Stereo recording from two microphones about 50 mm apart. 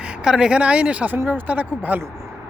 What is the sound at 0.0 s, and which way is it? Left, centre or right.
Speech, centre.